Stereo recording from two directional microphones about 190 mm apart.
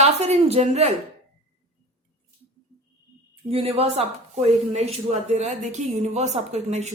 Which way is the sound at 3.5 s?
30° right (ahead or behind).